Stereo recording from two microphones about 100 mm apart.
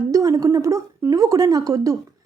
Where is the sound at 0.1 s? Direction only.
35° right (ahead or behind).